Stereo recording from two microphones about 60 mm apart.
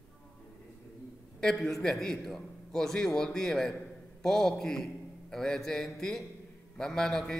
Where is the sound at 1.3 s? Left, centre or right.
Centre.